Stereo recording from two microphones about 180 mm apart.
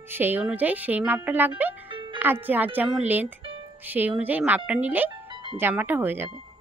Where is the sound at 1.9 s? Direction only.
25° right (ahead or behind).